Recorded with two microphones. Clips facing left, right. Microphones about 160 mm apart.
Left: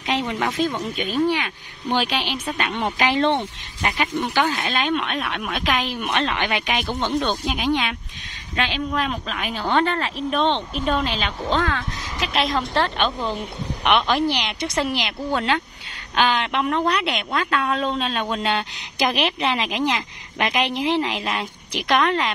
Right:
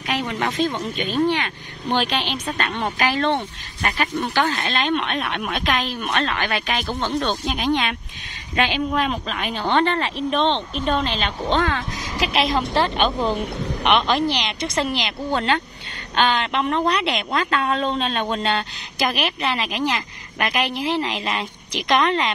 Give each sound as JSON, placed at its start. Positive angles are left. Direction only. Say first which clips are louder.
{"t": 0.0, "sound": "a sound", "louder": "left 1 dB", "side_deg": 20}
{"t": 0.4, "sound": "speech", "louder": "even", "side_deg": 10}
{"t": 8.5, "sound": "a woman's voice", "louder": "right 3 dB", "side_deg": -5}
{"t": 13.8, "sound": "speech", "louder": "even", "side_deg": 10}